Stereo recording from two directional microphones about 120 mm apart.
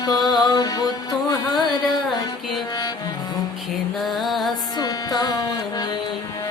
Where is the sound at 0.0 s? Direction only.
35° left (ahead or behind).